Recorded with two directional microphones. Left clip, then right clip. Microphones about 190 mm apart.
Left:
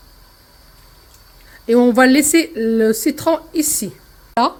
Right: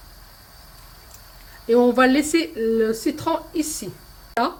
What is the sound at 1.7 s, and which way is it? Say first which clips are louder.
Speech: left 4 dB; 30° left (ahead or behind).